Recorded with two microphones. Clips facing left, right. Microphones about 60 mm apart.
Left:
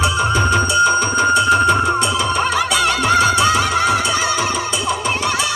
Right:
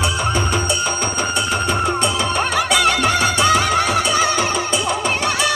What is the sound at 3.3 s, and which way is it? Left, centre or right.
Music, right.